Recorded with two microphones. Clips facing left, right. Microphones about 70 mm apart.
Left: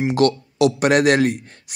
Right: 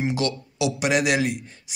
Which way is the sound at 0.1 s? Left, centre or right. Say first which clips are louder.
Left 8 dB; left.